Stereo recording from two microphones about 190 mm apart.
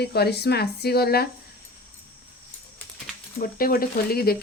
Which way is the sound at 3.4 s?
50° left (ahead or behind).